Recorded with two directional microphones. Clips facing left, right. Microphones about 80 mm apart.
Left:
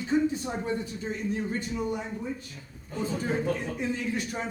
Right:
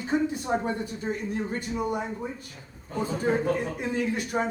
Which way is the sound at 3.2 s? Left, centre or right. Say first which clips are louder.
Right 5 dB; right.